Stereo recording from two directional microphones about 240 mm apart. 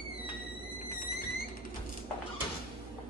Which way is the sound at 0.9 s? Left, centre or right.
Left.